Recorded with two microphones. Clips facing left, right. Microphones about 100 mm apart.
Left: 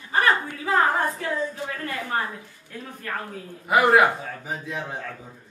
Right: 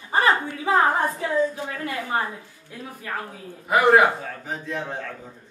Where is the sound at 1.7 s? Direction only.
15° right (ahead or behind).